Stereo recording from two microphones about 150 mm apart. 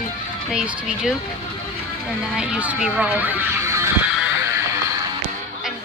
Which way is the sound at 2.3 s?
5° right (ahead or behind).